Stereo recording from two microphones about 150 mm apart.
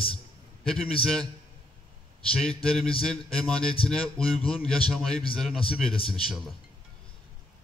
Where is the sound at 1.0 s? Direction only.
5° left (ahead or behind).